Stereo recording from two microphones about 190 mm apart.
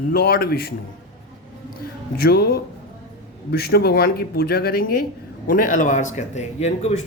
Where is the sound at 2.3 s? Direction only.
55° left (ahead or behind).